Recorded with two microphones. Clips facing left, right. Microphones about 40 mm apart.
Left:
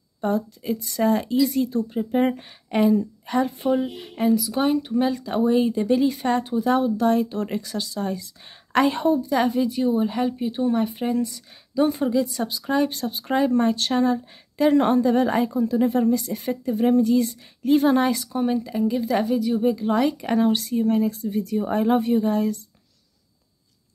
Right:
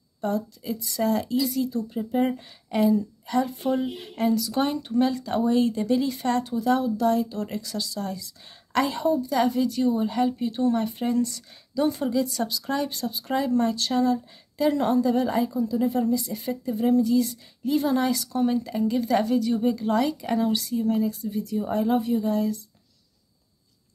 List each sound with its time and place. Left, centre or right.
0.2 s speech: left
3.6 s a woman's voice: centre; by 9.2 s left
9.3 s speech: left
12.9 s speech: left
18.3 s a woman's voice: centre
20.0 s speech: left